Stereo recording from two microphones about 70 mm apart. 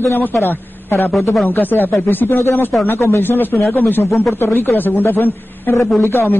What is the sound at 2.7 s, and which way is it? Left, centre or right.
Speech, centre.